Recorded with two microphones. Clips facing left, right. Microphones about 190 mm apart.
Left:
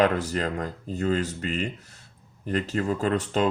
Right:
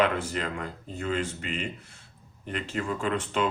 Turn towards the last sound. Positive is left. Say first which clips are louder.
# left 4 dB
turn(degrees=40)  # may be behind; listen again after turning